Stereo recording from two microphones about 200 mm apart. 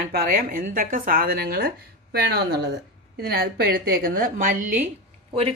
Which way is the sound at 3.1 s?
50° right (ahead or behind).